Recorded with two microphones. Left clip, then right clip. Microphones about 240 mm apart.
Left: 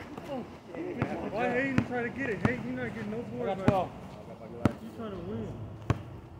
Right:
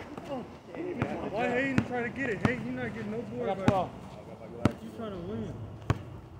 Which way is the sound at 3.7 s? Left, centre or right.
Right.